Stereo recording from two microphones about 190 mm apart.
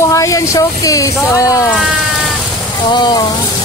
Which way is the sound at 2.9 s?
25° left (ahead or behind).